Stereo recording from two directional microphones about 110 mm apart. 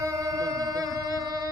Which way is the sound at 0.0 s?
30° right (ahead or behind).